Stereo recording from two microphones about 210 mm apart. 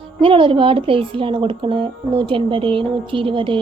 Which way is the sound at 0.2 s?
25° right (ahead or behind).